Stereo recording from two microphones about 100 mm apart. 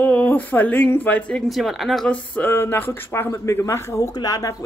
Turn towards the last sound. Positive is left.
turn(degrees=35)  # may be behind; listen again after turning